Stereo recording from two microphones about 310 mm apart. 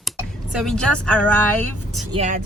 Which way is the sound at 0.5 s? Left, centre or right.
Centre.